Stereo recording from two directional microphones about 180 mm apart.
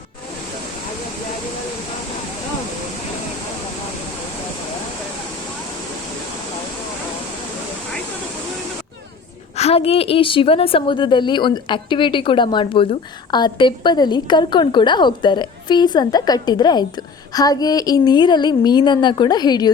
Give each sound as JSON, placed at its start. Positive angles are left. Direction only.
{"t": 9.6, "sound": "a woman's voice", "side_deg": 35}